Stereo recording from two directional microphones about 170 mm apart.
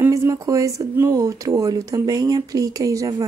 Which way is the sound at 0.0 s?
15° right (ahead or behind).